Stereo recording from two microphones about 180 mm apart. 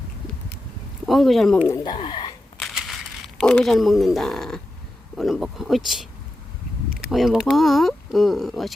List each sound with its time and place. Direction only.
1.0 s speech: centre (ahead or behind)
1.6 s speech: 20° left (ahead or behind)
2.6 s a sound: centre (ahead or behind)
5.1 s speech: centre (ahead or behind)